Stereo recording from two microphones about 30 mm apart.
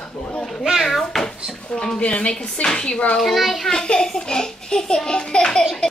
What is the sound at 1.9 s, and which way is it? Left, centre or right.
Speech, left.